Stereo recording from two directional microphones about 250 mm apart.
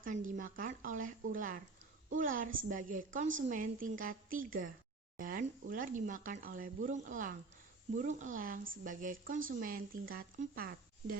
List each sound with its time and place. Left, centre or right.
0.3 s speech: right